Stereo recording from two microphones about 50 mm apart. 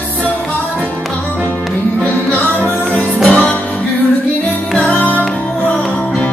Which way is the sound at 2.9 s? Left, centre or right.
Left.